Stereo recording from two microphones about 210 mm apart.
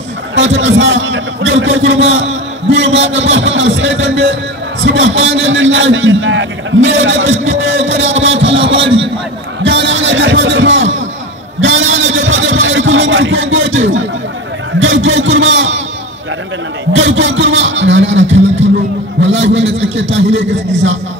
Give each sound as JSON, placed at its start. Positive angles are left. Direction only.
{"t": 0.6, "sound": "a man's voice", "side_deg": -60}
{"t": 8.7, "sound": "a man's voice", "side_deg": -25}
{"t": 9.6, "sound": "a sound", "side_deg": -60}
{"t": 14.8, "sound": "a man's voice", "side_deg": -65}
{"t": 16.9, "sound": "a man's voice", "side_deg": -65}
{"t": 19.2, "sound": "a man's voice", "side_deg": -60}